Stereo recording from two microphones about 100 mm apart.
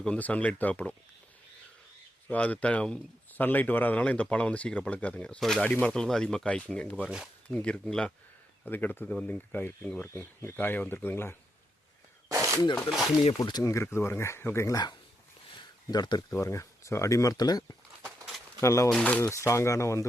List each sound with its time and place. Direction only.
0.0 s a man's voice: 10° left (ahead or behind)
2.2 s a man's voice: 15° left (ahead or behind)
5.4 s speech: centre (ahead or behind)
5.6 s a man's voice: 10° left (ahead or behind)
10.1 s speech: 30° left (ahead or behind)
12.3 s a sound: 30° right (ahead or behind)
12.6 s speech: 45° left (ahead or behind)
12.9 s speech: centre (ahead or behind)
13.4 s speech: 40° left (ahead or behind)
15.9 s speech: 45° left (ahead or behind)
16.3 s speech: 30° left (ahead or behind)
18.6 s speech: 30° left (ahead or behind)
18.9 s a man's voice: 10° left (ahead or behind)
19.2 s speech: 30° left (ahead or behind)